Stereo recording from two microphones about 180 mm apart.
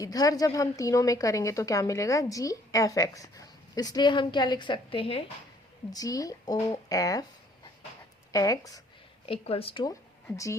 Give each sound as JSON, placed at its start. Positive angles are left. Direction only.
{"t": 0.0, "sound": "a woman's voice", "side_deg": 20}
{"t": 5.9, "sound": "a woman's voice", "side_deg": 20}
{"t": 8.3, "sound": "a woman's voice", "side_deg": 20}
{"t": 9.2, "sound": "a woman's voice", "side_deg": 30}
{"t": 9.9, "sound": "speech", "side_deg": 15}